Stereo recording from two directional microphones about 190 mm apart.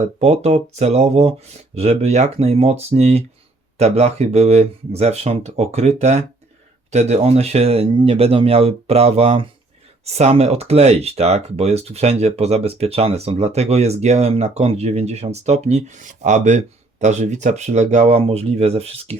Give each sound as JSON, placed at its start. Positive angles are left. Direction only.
{"t": 0.0, "sound": "speech", "side_deg": -35}